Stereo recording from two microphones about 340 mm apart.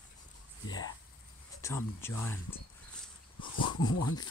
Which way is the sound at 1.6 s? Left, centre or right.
Centre.